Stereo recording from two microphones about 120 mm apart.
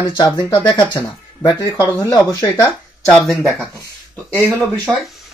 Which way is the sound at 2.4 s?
15° left (ahead or behind).